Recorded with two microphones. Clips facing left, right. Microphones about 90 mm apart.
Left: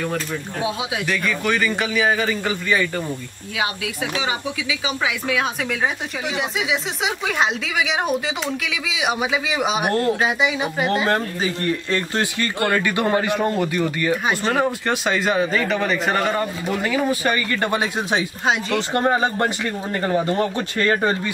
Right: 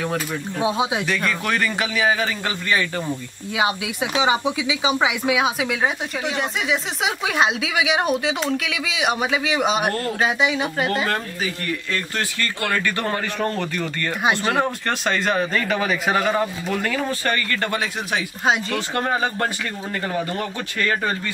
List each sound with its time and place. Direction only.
0.6 s speech: 30° right (ahead or behind)
1.0 s speech: centre (ahead or behind)
3.5 s speech: 20° right (ahead or behind); by 10.9 s centre (ahead or behind)
11.1 s speech: 30° left (ahead or behind)
12.6 s speech: 15° left (ahead or behind)
14.4 s speech: centre (ahead or behind); by 18.2 s 20° left (ahead or behind)
18.4 s speech: centre (ahead or behind)
18.8 s speech: 25° left (ahead or behind)